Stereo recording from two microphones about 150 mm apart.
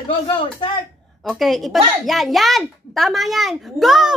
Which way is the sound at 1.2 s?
Centre (ahead or behind).